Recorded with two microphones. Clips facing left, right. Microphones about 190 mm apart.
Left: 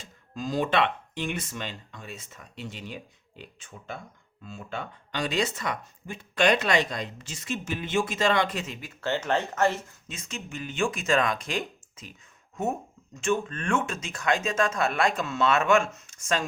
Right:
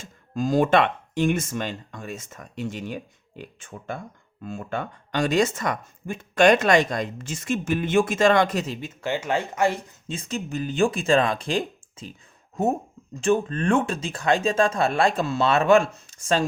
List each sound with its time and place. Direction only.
0.0 s speech: 50° right (ahead or behind)
8.9 s speech: 15° right (ahead or behind)
10.1 s speech: 35° right (ahead or behind)